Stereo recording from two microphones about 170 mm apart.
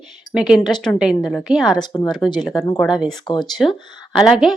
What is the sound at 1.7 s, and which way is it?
Speech, 25° left (ahead or behind).